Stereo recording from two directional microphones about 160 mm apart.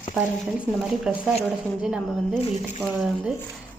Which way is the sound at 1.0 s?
5° right (ahead or behind).